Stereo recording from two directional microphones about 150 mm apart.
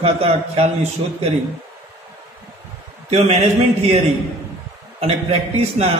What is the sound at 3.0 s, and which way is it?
Speech, 45° right (ahead or behind).